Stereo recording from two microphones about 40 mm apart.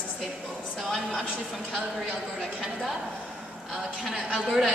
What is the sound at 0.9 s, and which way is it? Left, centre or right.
Speech, centre.